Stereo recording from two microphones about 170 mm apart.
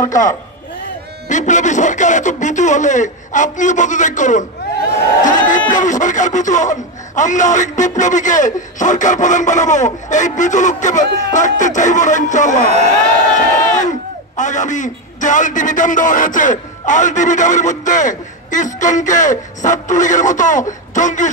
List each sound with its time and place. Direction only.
0.1 s a man's voice: 50° left (ahead or behind)
5.2 s a sound: 50° left (ahead or behind)
5.7 s a man's voice: 45° left (ahead or behind)
13.7 s a man's voice: 45° left (ahead or behind)